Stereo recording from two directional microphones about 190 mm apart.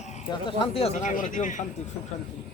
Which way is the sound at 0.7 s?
35° left (ahead or behind).